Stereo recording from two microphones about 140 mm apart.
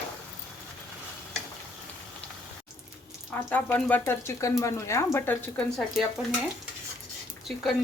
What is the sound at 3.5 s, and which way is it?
Speech, 10° left (ahead or behind).